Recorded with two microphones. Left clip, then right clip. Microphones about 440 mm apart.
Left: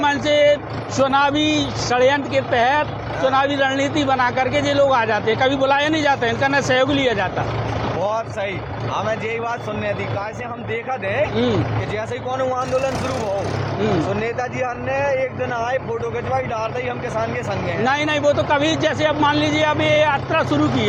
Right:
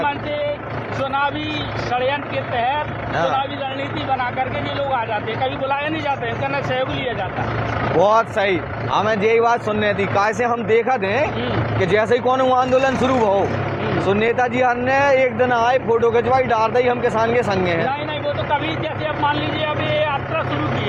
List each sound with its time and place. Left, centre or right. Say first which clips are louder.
0.0 s vehicle: left 6 dB; left
1.0 s speech: left 5 dB; left
4.9 s speech: left 4 dB; left
8.0 s speech: right 9 dB; right
14.3 s speech: right 6 dB; right
19.0 s speech: left 1 dB; left